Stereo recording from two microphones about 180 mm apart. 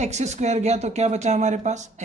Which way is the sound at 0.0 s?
40° right (ahead or behind).